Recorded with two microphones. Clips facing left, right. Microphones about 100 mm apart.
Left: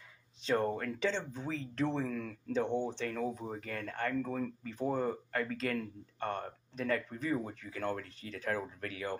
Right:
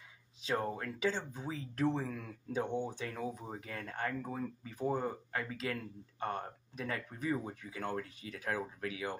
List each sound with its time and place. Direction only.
0.4 s speech: 5° right (ahead or behind)
4.2 s speech: 20° right (ahead or behind)
4.6 s speech: 10° right (ahead or behind)